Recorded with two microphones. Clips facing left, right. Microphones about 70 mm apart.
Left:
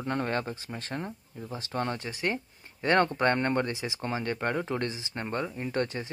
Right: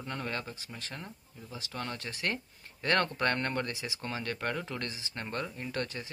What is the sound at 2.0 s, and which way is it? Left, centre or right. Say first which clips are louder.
Speech: left 4 dB; centre.